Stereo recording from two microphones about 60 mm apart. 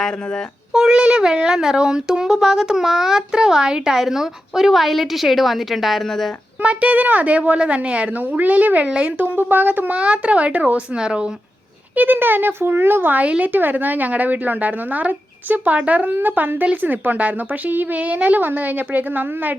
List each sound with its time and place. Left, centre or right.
0.7 s speech: centre
6.6 s speech: right
9.2 s speech: right; by 11.3 s centre
11.9 s speech: right